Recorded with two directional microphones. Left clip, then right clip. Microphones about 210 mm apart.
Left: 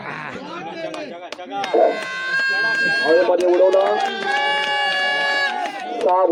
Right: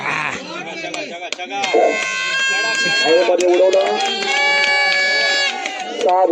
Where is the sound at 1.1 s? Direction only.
40° right (ahead or behind).